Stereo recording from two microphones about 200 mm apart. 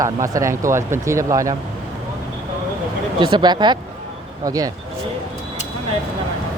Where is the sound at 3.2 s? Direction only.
25° right (ahead or behind).